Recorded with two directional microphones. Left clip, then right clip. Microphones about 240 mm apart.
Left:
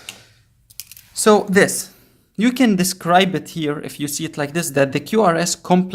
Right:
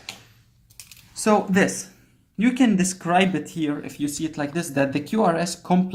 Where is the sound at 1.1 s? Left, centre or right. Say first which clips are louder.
Left 6 dB; left.